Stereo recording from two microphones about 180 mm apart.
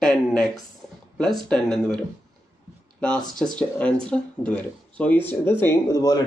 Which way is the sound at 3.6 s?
5° left (ahead or behind).